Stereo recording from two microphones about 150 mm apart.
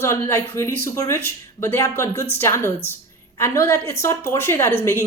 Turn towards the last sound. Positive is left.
turn(degrees=15)  # may be behind; listen again after turning